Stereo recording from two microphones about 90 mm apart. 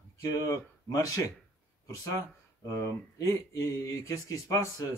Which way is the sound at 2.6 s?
35° left (ahead or behind).